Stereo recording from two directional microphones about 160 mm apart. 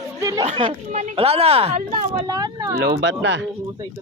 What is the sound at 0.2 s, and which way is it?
Chatter, 20° right (ahead or behind).